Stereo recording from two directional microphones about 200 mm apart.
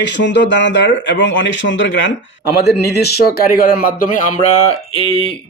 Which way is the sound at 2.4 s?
55° left (ahead or behind).